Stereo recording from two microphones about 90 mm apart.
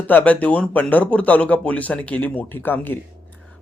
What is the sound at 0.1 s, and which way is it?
Speech, 20° left (ahead or behind).